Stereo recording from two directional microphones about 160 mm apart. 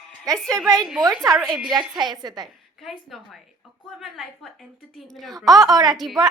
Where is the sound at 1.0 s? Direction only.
25° right (ahead or behind).